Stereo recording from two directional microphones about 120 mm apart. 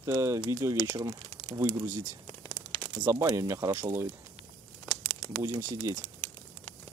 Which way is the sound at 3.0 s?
20° right (ahead or behind).